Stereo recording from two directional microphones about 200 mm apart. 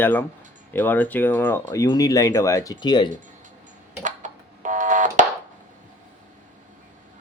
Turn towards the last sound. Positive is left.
turn(degrees=-40)  # may be behind; listen again after turning